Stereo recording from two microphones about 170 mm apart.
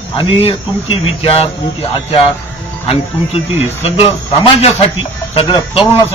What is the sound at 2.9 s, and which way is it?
A man's voice, 35° left (ahead or behind).